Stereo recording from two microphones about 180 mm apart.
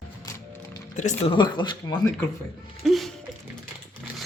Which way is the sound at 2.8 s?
Centre (ahead or behind).